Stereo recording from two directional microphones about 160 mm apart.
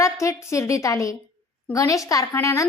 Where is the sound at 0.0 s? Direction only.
20° left (ahead or behind).